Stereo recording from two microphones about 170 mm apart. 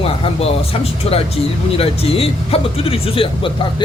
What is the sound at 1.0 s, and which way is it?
A man's voice, 35° left (ahead or behind).